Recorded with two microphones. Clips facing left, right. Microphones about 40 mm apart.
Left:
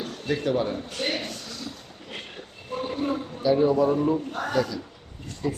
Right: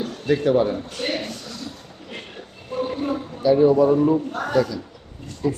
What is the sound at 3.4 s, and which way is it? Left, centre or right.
A man's voice, centre.